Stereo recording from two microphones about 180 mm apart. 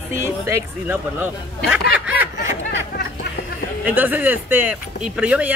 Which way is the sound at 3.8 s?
10° right (ahead or behind).